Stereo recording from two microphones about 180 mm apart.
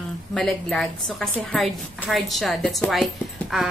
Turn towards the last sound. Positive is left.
turn(degrees=0)  # may be behind; listen again after turning